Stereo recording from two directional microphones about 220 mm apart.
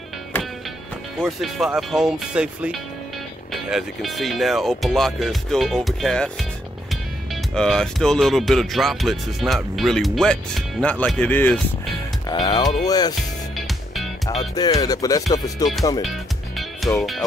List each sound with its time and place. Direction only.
1.2 s speech: centre (ahead or behind)
7.5 s speech: centre (ahead or behind)
12.3 s speech: 20° left (ahead or behind)
12.8 s music: 15° left (ahead or behind)
13.6 s music: centre (ahead or behind)
14.3 s music: 15° left (ahead or behind)
16.0 s music: centre (ahead or behind)